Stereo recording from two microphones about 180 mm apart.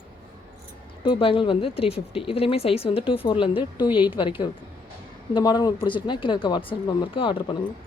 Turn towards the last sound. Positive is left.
turn(degrees=30)  # may be behind; listen again after turning